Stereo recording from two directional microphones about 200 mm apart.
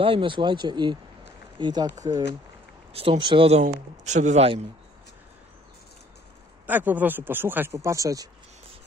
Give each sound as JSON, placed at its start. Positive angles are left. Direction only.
{"t": 0.0, "sound": "speech", "side_deg": -25}
{"t": 2.9, "sound": "speech", "side_deg": -30}
{"t": 6.6, "sound": "speech", "side_deg": -10}